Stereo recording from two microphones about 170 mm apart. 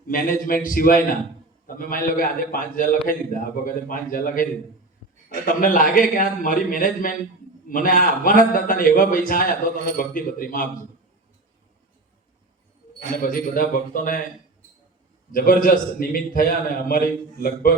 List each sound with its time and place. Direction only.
0.1 s a man's voice: 55° left (ahead or behind)
13.0 s a man's voice: 55° left (ahead or behind)
15.3 s a man's voice: 55° left (ahead or behind)